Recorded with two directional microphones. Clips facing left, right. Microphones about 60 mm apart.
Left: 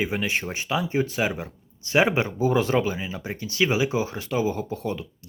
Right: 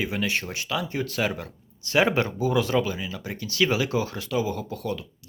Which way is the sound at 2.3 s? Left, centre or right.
Left.